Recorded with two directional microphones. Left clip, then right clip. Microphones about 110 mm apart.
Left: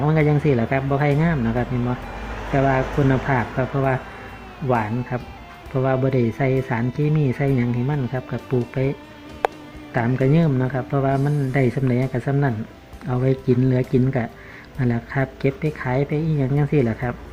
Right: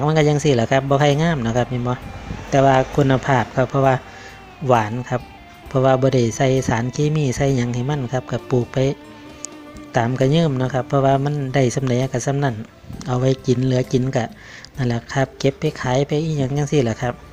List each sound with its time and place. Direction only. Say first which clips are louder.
0.0 s speech: right 3 dB; 30° right (ahead or behind)
2.5 s speech: right 5 dB; 35° right (ahead or behind)
9.9 s speech: right 3 dB; 30° right (ahead or behind)